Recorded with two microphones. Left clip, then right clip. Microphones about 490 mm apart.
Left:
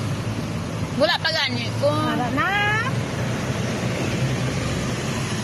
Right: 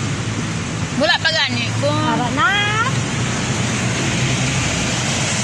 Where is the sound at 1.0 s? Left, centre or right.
Left.